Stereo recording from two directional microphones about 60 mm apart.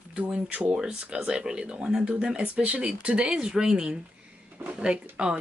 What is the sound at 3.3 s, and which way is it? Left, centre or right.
Speech, centre.